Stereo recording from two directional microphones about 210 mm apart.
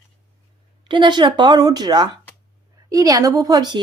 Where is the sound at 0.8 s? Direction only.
20° right (ahead or behind).